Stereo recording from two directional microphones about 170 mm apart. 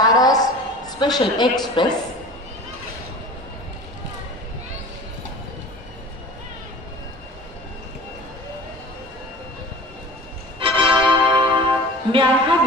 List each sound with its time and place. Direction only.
0.1 s music: 20° left (ahead or behind)
0.9 s speech: 25° left (ahead or behind)
10.6 s music: 30° right (ahead or behind)